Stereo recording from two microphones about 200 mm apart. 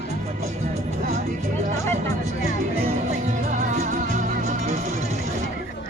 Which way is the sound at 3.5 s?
35° right (ahead or behind).